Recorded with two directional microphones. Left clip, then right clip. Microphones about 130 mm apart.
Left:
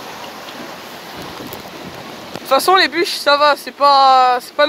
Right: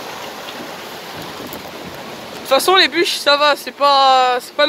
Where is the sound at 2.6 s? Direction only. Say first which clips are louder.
Even; 15° right (ahead or behind).